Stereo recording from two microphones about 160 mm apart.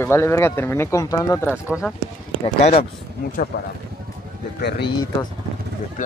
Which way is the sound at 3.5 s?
75° left (ahead or behind).